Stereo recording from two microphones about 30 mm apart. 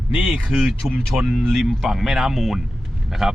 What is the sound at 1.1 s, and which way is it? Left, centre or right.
A man's voice, centre.